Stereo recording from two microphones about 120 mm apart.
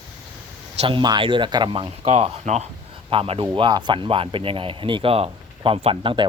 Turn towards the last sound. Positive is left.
turn(degrees=-45)  # may be behind; listen again after turning